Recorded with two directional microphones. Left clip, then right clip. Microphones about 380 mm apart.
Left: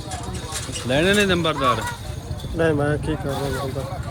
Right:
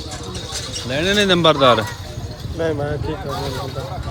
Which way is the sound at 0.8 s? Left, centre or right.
Centre.